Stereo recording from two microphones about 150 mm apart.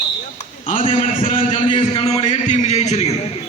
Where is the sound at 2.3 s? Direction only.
50° left (ahead or behind).